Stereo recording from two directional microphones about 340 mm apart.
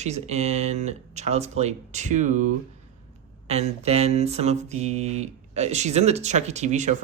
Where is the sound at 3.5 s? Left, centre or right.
Centre.